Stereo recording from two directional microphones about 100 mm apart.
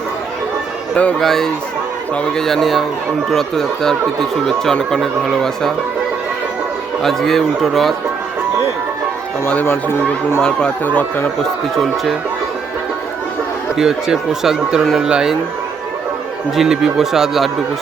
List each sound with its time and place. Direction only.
0.9 s speech: 10° left (ahead or behind)
7.0 s speech: 5° left (ahead or behind)
9.6 s speech: 25° left (ahead or behind)
10.4 s speech: 15° left (ahead or behind)
13.7 s speech: 5° right (ahead or behind)
16.6 s speech: 5° right (ahead or behind)